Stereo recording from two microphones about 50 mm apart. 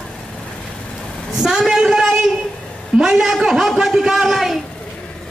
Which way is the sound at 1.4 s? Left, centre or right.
Centre.